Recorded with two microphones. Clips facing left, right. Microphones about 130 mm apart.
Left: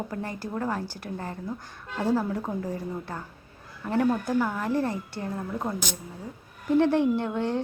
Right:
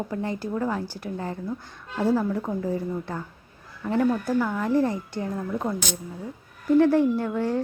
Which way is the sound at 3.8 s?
15° left (ahead or behind).